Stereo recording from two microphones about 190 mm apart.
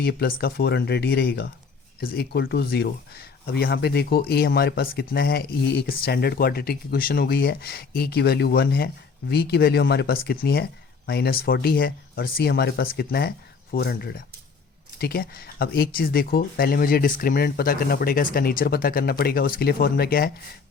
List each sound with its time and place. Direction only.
0.0 s speech: 55° left (ahead or behind)